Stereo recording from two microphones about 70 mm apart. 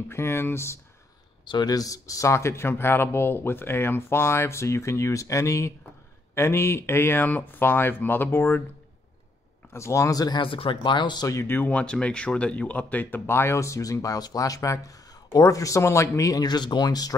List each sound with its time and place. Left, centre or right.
0.1 s speech: left
1.5 s speech: left
9.7 s speech: left
11.0 s speech: left
11.2 s speech: left
11.7 s speech: centre
13.4 s speech: left
16.4 s speech: left